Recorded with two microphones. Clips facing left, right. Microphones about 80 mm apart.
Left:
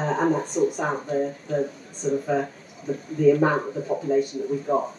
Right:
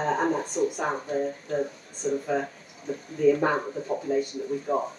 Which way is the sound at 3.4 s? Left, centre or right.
Centre.